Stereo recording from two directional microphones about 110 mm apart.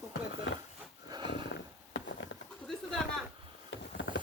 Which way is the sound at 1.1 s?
45° right (ahead or behind).